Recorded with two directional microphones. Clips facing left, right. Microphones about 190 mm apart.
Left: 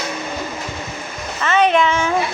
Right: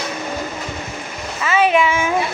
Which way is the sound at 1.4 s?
5° right (ahead or behind).